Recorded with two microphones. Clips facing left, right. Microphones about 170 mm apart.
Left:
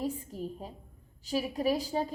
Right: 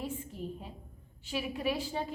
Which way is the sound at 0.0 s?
40° left (ahead or behind).